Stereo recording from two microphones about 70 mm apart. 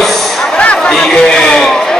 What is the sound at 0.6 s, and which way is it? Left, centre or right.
Chatter, centre.